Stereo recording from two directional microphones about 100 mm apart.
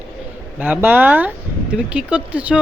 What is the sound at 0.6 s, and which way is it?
Speech, 15° right (ahead or behind).